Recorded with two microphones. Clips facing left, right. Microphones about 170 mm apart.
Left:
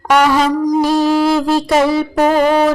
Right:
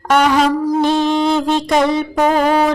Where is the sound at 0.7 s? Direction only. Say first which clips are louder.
Left 2 dB; 5° left (ahead or behind).